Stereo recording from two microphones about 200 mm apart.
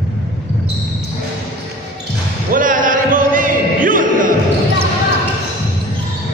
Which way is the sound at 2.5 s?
40° right (ahead or behind).